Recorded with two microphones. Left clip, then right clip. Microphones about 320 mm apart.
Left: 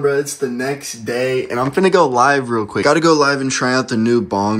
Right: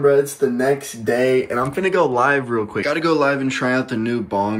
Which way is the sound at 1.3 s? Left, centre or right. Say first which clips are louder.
Even; centre.